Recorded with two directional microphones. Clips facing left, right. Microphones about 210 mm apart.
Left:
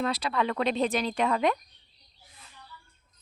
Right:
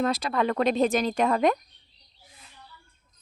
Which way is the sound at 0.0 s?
45° right (ahead or behind).